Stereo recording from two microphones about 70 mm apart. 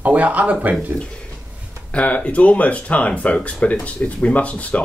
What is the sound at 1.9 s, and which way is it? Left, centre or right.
Speech, centre.